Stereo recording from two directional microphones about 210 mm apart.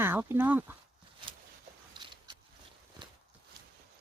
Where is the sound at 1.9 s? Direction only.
20° right (ahead or behind).